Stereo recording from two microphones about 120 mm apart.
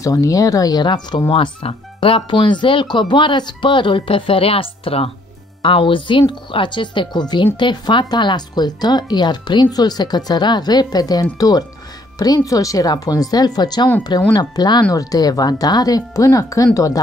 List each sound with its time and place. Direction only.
0.0 s speech: 30° left (ahead or behind)
1.3 s speech: 50° left (ahead or behind); by 17.0 s 30° left (ahead or behind)